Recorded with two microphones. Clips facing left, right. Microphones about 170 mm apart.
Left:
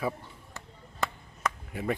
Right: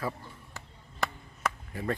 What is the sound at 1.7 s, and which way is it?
Speech, 10° left (ahead or behind).